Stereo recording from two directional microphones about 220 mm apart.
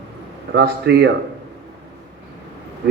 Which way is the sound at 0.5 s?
50° right (ahead or behind).